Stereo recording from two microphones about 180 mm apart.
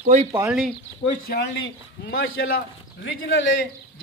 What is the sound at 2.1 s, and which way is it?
Speech, 90° left.